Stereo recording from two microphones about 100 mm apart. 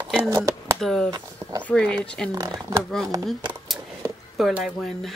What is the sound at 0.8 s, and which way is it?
Speech, 5° left (ahead or behind).